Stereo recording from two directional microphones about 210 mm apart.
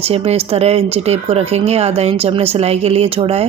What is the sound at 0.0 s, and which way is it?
A woman's voice, 30° right (ahead or behind).